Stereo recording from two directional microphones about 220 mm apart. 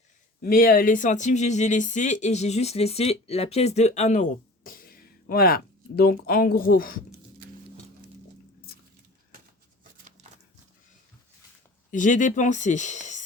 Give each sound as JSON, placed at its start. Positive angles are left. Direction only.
{"t": 0.4, "sound": "speech", "side_deg": 40}
{"t": 11.9, "sound": "speech", "side_deg": 35}